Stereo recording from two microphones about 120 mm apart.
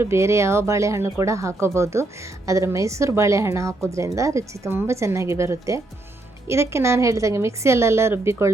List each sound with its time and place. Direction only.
0.0 s speech: 20° right (ahead or behind)